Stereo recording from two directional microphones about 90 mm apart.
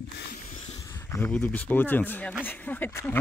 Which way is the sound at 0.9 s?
25° left (ahead or behind).